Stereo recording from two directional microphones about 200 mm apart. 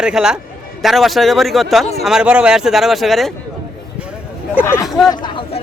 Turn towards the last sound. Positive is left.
turn(degrees=25)  # may be behind; listen again after turning